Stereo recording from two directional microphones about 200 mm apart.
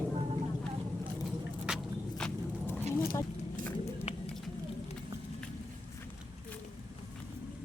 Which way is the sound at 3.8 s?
30° left (ahead or behind).